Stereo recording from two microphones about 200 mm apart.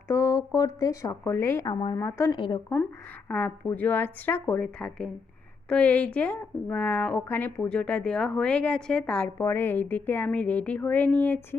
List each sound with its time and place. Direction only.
0.1 s speech: 15° left (ahead or behind)